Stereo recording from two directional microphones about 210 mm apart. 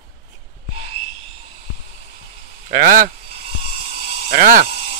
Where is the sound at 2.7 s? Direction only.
40° right (ahead or behind).